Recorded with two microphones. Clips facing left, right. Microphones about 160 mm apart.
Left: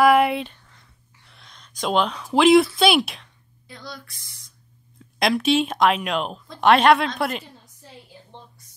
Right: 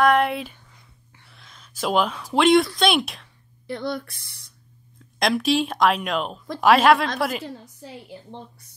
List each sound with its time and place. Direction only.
0.0 s a sound: 5° left (ahead or behind)
3.6 s speech: 60° right (ahead or behind)
4.9 s a woman's voice: centre (ahead or behind)